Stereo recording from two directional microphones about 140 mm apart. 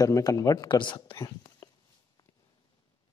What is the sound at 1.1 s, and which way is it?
Whispering, 20° left (ahead or behind).